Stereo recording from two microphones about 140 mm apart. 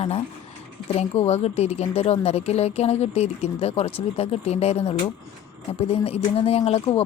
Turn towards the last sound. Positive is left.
turn(degrees=45)  # may be behind; listen again after turning